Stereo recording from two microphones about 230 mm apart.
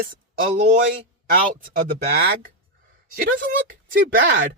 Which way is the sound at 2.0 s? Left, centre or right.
Right.